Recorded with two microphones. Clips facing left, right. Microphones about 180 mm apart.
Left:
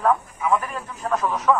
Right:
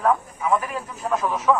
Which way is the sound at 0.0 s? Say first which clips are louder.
Even; centre (ahead or behind).